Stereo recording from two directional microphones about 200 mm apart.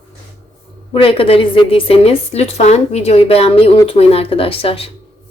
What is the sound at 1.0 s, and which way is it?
A woman's voice, 25° left (ahead or behind).